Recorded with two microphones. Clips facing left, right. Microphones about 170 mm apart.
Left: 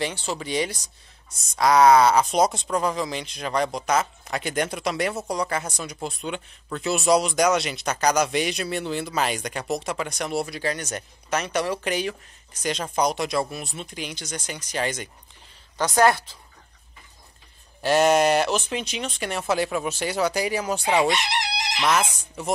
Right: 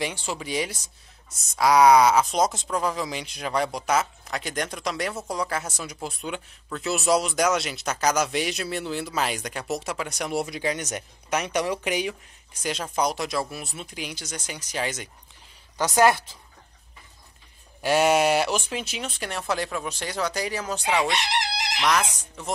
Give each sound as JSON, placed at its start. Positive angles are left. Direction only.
{"t": 0.0, "sound": "speech", "side_deg": -10}
{"t": 15.8, "sound": "speech", "side_deg": -20}
{"t": 17.8, "sound": "speech", "side_deg": -5}
{"t": 21.8, "sound": "speech", "side_deg": 5}